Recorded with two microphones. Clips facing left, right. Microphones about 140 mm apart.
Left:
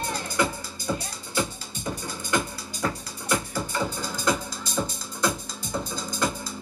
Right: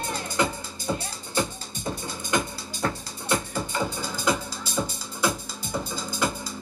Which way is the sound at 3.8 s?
5° right (ahead or behind).